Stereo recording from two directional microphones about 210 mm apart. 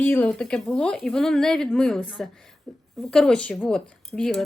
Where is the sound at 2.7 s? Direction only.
5° left (ahead or behind).